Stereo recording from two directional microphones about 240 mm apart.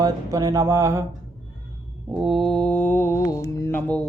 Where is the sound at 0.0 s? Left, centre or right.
Centre.